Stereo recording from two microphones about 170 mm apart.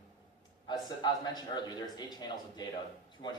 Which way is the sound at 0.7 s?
25° left (ahead or behind).